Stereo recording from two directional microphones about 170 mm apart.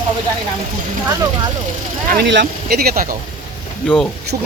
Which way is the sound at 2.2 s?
85° right.